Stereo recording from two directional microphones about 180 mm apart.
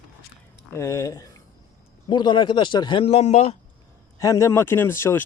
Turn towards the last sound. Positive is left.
turn(degrees=15)  # may be behind; listen again after turning